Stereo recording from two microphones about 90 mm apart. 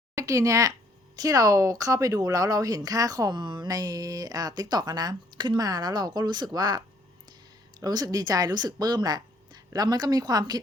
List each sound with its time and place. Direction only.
0.2 s speech: 35° right (ahead or behind)